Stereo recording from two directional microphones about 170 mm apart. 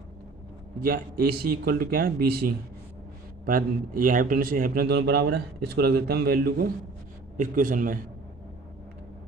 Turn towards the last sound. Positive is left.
turn(degrees=-55)  # may be behind; listen again after turning